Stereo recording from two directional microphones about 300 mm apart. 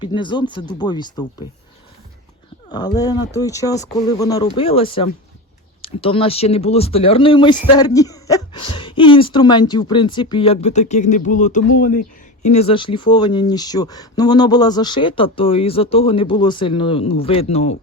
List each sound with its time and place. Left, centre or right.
0.0 s speech: centre
2.6 s speech: centre